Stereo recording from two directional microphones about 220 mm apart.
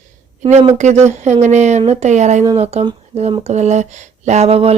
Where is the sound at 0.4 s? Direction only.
30° right (ahead or behind).